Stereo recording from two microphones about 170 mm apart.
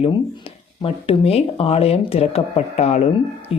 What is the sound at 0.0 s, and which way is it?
Speech, 30° left (ahead or behind).